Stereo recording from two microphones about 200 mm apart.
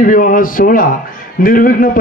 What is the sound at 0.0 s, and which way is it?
A man's voice, 40° left (ahead or behind).